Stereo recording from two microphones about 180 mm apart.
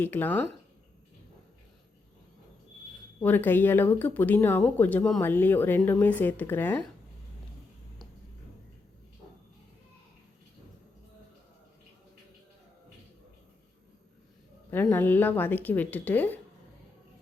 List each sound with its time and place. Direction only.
0.0 s speech: 10° left (ahead or behind)
3.2 s speech: 10° left (ahead or behind)
14.7 s speech: 10° left (ahead or behind)